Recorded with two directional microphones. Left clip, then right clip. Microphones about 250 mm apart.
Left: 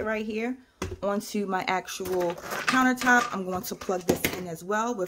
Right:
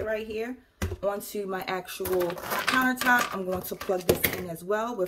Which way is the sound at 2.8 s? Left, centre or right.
Left.